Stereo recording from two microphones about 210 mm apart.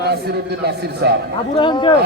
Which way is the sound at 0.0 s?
50° right (ahead or behind).